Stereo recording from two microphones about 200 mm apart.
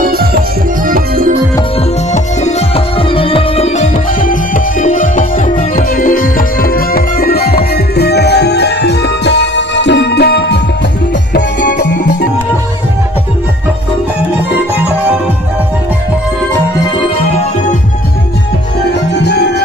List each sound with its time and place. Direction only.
0.0 s music: 50° right (ahead or behind)
2.1 s music: 30° left (ahead or behind); by 12.1 s 60° left (ahead or behind)
19.2 s music: 55° left (ahead or behind)